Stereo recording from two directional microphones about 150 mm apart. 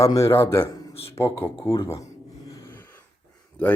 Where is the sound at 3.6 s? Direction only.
10° left (ahead or behind).